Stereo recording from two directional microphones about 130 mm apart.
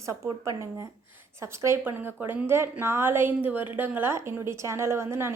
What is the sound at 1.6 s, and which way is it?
A woman's voice, 20° right (ahead or behind).